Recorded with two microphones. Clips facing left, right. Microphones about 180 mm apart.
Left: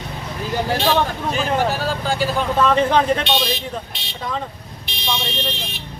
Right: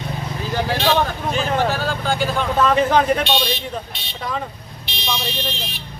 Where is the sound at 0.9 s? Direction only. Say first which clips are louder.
Right 1 dB; 5° left (ahead or behind).